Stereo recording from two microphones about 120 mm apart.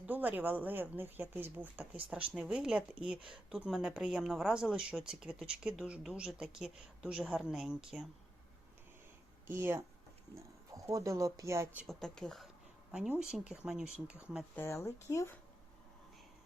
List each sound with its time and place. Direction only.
0.0 s speech: 15° right (ahead or behind)
9.5 s speech: 20° right (ahead or behind)
11.9 s speech: 5° left (ahead or behind)
12.9 s speech: 5° right (ahead or behind)
14.5 s speech: 20° left (ahead or behind)